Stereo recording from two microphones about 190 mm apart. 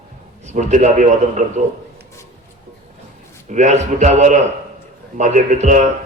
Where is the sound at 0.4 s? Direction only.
40° right (ahead or behind).